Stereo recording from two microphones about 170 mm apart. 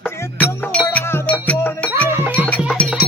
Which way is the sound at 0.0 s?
15° left (ahead or behind).